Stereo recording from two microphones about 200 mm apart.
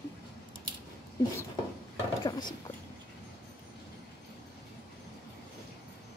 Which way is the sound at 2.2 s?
20° left (ahead or behind).